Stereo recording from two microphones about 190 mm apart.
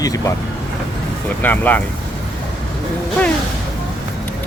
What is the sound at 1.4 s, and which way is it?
Speech, 10° left (ahead or behind).